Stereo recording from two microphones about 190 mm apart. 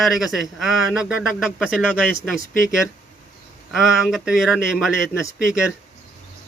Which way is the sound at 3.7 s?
Centre (ahead or behind).